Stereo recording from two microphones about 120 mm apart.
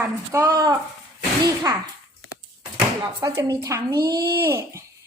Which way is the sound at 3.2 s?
25° right (ahead or behind).